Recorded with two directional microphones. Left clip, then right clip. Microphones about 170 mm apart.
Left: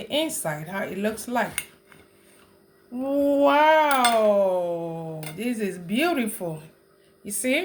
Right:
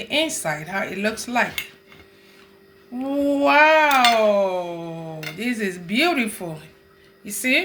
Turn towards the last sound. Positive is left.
turn(degrees=25)  # may be behind; listen again after turning